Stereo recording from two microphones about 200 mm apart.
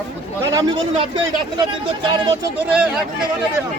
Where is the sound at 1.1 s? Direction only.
20° right (ahead or behind).